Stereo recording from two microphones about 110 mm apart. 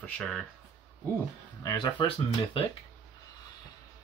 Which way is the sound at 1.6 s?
40° left (ahead or behind).